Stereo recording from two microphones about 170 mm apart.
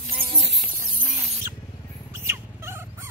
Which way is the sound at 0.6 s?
45° right (ahead or behind).